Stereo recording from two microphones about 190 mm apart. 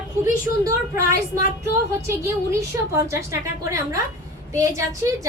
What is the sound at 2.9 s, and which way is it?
Speech, 15° right (ahead or behind).